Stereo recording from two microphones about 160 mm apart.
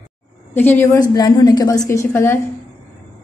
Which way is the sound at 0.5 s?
10° left (ahead or behind).